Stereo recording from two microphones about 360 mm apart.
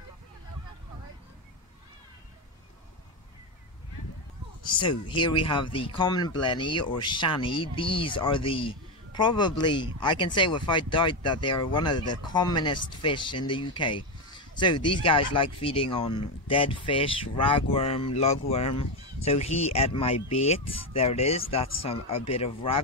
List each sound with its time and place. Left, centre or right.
4.6 s speech: centre
22.1 s speech: left
22.4 s speech: centre